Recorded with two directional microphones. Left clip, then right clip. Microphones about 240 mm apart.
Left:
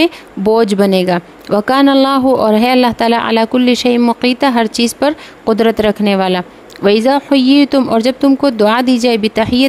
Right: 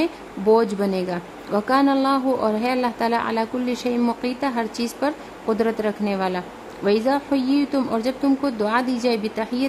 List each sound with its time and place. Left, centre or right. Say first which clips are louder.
0.0 s a woman's voice: left 9 dB; left